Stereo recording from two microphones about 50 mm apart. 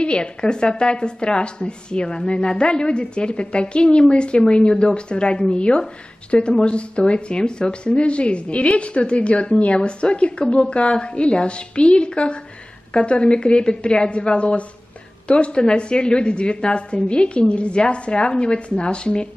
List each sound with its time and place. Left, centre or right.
0.0 s a woman's voice: centre